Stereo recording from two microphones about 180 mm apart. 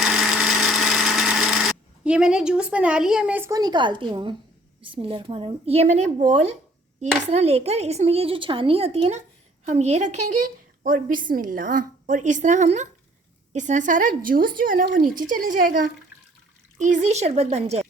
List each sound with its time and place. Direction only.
0.0 s tools: 5° right (ahead or behind); by 4.4 s 25° right (ahead or behind)
4.8 s speech: 30° right (ahead or behind)
10.8 s speech: 50° right (ahead or behind)